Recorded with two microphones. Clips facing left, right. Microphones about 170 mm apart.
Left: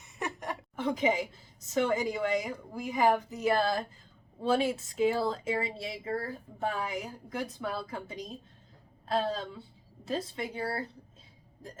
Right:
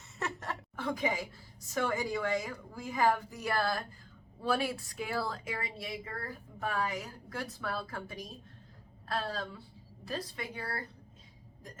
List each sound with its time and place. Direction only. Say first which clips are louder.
0.2 s a woman's voice: left 2 dB; 15° left (ahead or behind)